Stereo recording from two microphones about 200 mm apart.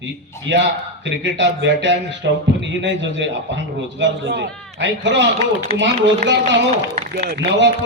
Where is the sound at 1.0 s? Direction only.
65° right (ahead or behind).